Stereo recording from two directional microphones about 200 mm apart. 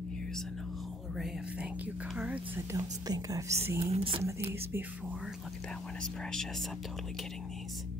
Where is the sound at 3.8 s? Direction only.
30° right (ahead or behind).